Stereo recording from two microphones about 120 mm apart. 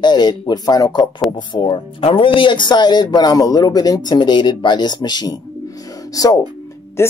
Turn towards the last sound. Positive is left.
turn(degrees=20)  # may be behind; listen again after turning